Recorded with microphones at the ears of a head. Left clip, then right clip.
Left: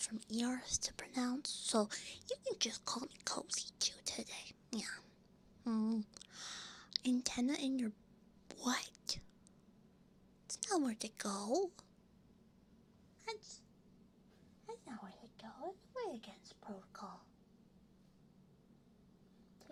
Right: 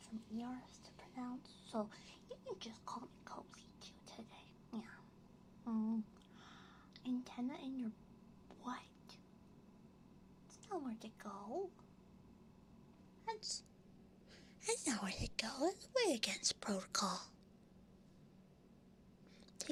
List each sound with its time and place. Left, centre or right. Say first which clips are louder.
0.0 s speech: left 8 dB; left
6.1 s whispering: left 11 dB; left
10.5 s speech: left 9 dB; left
14.6 s speech: right 10 dB; right